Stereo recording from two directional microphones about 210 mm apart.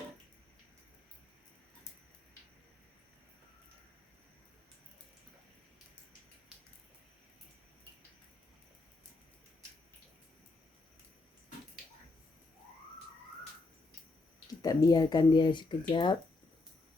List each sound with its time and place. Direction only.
14.6 s speech: 20° left (ahead or behind)